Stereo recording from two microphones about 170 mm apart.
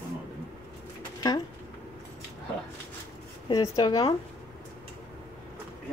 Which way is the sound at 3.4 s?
25° left (ahead or behind).